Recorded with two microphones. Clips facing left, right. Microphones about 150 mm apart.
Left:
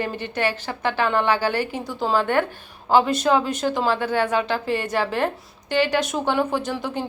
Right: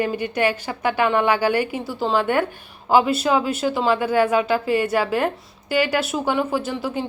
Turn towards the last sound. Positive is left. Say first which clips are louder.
# right 1 dB
turn(degrees=-5)  # may be behind; listen again after turning